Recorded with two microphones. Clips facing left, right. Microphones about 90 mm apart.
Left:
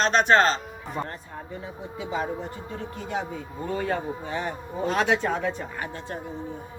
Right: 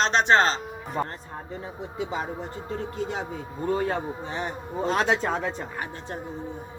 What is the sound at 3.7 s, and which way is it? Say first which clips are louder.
A man's voice: right 2 dB; 30° right (ahead or behind).